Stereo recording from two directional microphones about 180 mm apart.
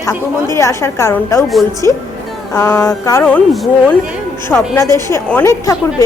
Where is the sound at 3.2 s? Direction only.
5° left (ahead or behind).